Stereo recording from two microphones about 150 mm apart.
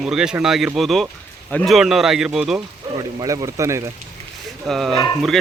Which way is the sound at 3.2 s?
20° right (ahead or behind).